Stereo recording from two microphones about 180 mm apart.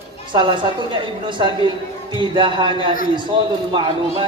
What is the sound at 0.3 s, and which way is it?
Speech, 25° right (ahead or behind).